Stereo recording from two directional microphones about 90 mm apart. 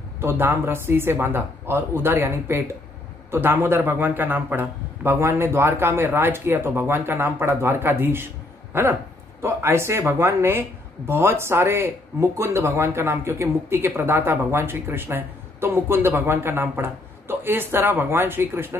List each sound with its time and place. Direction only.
0.2 s speech: 25° right (ahead or behind)